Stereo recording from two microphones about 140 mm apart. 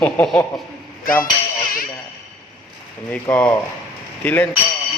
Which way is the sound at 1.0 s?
90° left.